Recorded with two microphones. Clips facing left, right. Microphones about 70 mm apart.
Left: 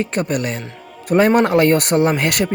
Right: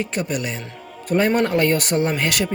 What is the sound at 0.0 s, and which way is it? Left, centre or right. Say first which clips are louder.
Speech: left 4 dB; left.